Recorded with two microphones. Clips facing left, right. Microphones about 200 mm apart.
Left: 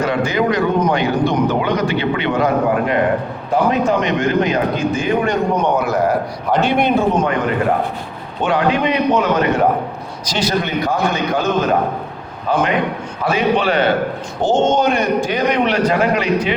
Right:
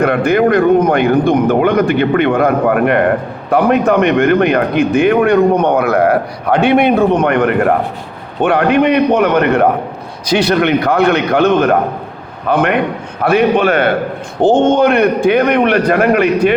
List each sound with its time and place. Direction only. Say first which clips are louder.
0.0 s a man's voice: right 6 dB; 55° right (ahead or behind)